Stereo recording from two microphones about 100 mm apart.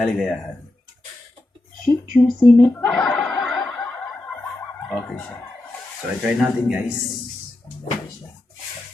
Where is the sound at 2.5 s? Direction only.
15° left (ahead or behind).